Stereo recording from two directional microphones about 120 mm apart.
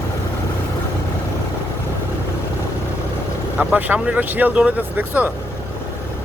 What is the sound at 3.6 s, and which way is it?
Speech, 15° right (ahead or behind).